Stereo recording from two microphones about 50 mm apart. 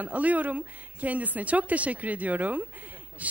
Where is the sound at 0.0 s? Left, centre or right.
Right.